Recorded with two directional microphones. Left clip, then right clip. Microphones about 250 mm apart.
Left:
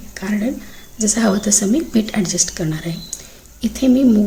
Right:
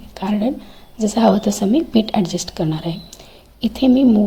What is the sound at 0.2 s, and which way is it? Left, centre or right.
A woman's voice, centre.